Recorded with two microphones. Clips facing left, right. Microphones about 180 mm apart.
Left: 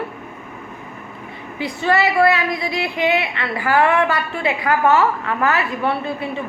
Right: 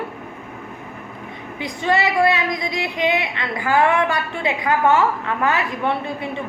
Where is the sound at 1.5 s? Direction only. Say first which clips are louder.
Left 2 dB; 20° right (ahead or behind).